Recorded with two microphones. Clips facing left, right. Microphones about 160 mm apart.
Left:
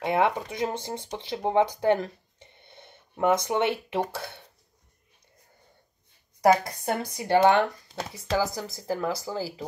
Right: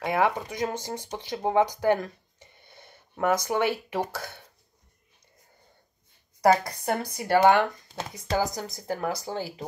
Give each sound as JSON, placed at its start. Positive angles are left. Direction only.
{"t": 0.0, "sound": "speech", "side_deg": 25}
{"t": 6.4, "sound": "speech", "side_deg": 20}